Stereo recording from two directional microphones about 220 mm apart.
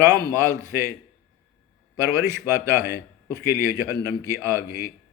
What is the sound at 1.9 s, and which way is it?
A man's voice, 15° right (ahead or behind).